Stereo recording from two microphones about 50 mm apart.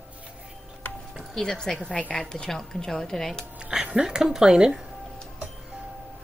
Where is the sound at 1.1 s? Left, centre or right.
Centre.